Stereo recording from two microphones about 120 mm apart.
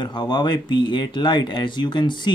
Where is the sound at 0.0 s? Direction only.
40° left (ahead or behind).